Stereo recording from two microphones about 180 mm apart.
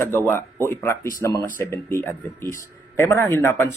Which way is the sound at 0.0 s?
10° left (ahead or behind).